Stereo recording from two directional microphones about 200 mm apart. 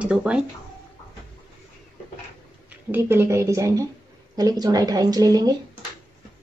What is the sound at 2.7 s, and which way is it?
Speech, 10° right (ahead or behind).